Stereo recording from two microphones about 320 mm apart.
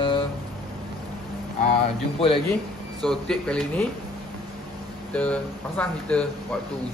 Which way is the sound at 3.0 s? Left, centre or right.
Centre.